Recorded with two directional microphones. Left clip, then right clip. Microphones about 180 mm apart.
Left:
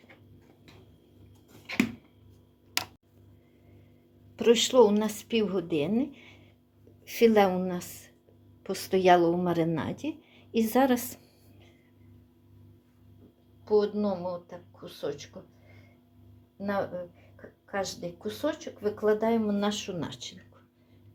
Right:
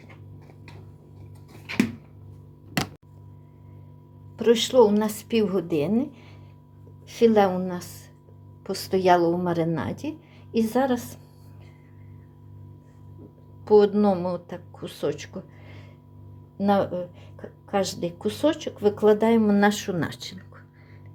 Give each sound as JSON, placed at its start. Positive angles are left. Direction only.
{"t": 4.4, "sound": "a woman's voice", "side_deg": 10}
{"t": 7.1, "sound": "a woman's voice", "side_deg": 15}
{"t": 13.7, "sound": "speech", "side_deg": -55}
{"t": 16.6, "sound": "speech", "side_deg": -55}